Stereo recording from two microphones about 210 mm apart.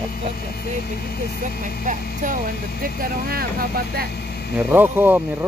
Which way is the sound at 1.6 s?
35° right (ahead or behind).